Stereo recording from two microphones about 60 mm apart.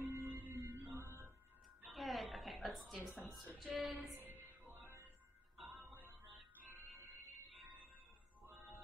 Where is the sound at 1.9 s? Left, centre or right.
Centre.